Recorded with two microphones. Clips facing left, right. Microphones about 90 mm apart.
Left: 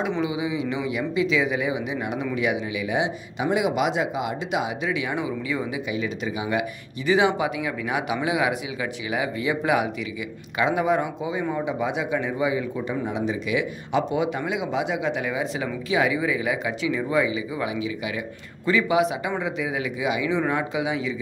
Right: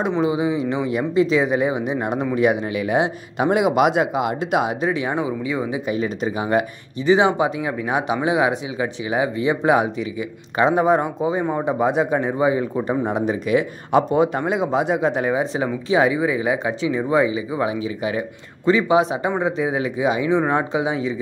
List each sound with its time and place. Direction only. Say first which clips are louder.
0.2 s speech: right 6 dB; 40° right (ahead or behind)
4.9 s speech: right 4 dB; 35° right (ahead or behind)
5.5 s speech: right 4 dB; 25° right (ahead or behind)
5.9 s speech: right 5 dB; 40° right (ahead or behind)
7.1 s speech: right 4 dB; 30° right (ahead or behind)
13.0 s speech: right 5 dB; 50° right (ahead or behind); by 21.1 s 35° right (ahead or behind)